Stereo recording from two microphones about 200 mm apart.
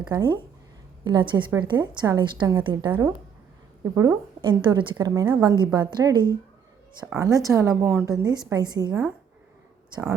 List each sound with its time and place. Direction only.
0.1 s a woman's voice: 20° right (ahead or behind)
8.9 s a woman's voice: 10° right (ahead or behind)